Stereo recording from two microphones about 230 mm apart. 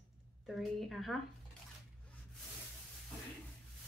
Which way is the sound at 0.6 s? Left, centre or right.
Centre.